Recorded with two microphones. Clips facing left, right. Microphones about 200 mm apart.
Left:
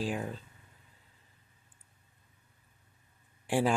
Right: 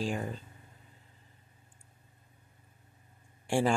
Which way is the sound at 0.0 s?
5° left (ahead or behind).